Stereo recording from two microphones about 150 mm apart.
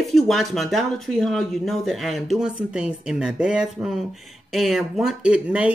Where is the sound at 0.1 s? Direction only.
Centre (ahead or behind).